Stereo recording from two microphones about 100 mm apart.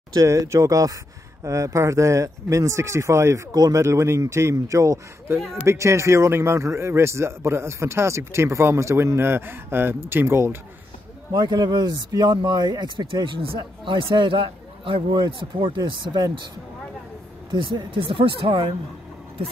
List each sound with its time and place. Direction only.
0.1 s a man's voice: 30° right (ahead or behind)
11.3 s speech: 45° right (ahead or behind)
12.9 s speech: 55° right (ahead or behind)
17.5 s speech: 55° right (ahead or behind)